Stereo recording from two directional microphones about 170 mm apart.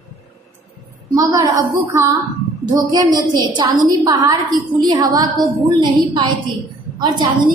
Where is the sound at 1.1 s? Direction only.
20° right (ahead or behind).